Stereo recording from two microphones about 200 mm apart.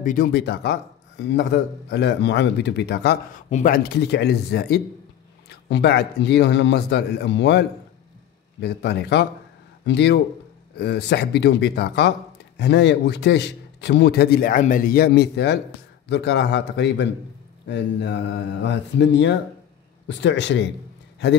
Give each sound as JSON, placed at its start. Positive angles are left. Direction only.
{"t": 0.0, "sound": "speech", "side_deg": 40}
{"t": 0.3, "sound": "a man's voice", "side_deg": 60}
{"t": 3.4, "sound": "a man's voice", "side_deg": 40}